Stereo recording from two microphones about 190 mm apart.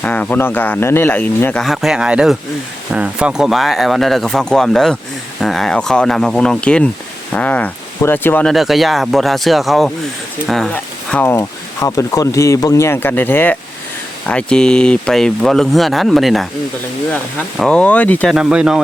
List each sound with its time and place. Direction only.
0.0 s speech: 10° left (ahead or behind)
17.6 s speech: 5° left (ahead or behind)
18.3 s speech: 5° right (ahead or behind)